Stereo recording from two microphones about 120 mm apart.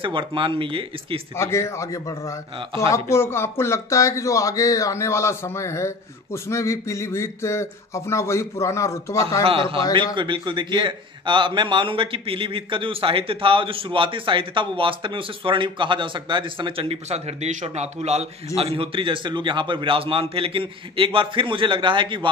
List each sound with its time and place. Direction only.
0.0 s a man's voice: 45° right (ahead or behind)
1.4 s speech: 20° left (ahead or behind)
2.9 s speech: 20° left (ahead or behind)
9.4 s a man's voice: 50° right (ahead or behind)